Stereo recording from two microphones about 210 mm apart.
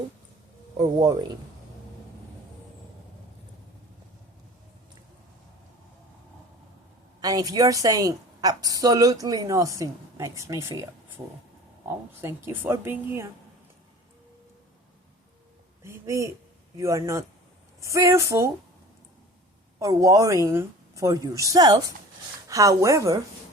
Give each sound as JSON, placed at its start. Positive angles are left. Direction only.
{"t": 0.8, "sound": "speech", "side_deg": -20}
{"t": 7.2, "sound": "a woman's voice", "side_deg": -15}
{"t": 11.9, "sound": "a woman's voice", "side_deg": -10}
{"t": 15.8, "sound": "a woman's voice", "side_deg": -15}
{"t": 19.8, "sound": "a woman's voice", "side_deg": -15}